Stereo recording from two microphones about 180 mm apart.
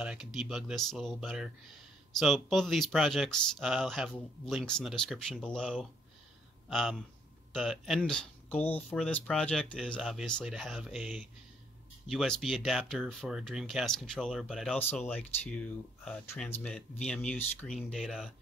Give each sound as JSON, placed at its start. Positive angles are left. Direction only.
{"t": 0.0, "sound": "speech", "side_deg": -5}